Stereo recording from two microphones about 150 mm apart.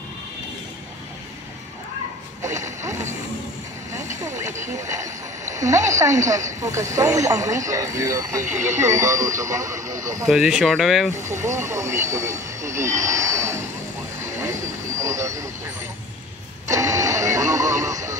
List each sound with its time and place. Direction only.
2.4 s a sound: 20° right (ahead or behind)
3.9 s vehicle: 20° right (ahead or behind)
4.6 s speech: 20° right (ahead or behind)
10.2 s speech: centre (ahead or behind)
11.1 s speech: 15° right (ahead or behind)
14.2 s vehicle: 20° right (ahead or behind)
16.6 s radio: 20° right (ahead or behind)